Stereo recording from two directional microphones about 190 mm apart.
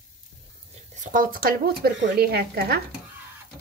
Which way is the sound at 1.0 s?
45° right (ahead or behind).